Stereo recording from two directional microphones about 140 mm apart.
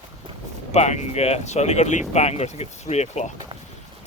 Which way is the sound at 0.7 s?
55° left (ahead or behind).